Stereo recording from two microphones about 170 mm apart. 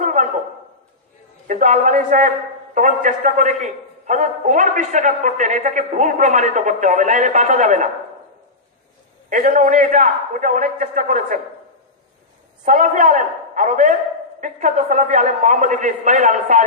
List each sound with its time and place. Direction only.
0.0 s a sound: 50° right (ahead or behind)
1.5 s a man's voice: 45° right (ahead or behind)
9.3 s a man's voice: 50° right (ahead or behind)
12.6 s a man's voice: 50° right (ahead or behind)